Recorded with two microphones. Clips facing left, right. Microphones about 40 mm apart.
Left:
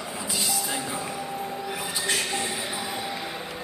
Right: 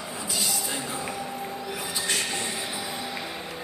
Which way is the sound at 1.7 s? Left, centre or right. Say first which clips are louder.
Left 1 dB; centre.